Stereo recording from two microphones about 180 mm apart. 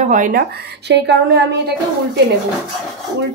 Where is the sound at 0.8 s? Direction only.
70° right (ahead or behind).